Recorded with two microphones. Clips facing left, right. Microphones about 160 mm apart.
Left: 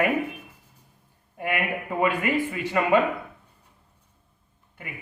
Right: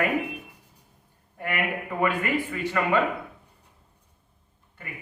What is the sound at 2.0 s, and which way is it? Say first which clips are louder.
A man's voice: left 2 dB; 15° left (ahead or behind).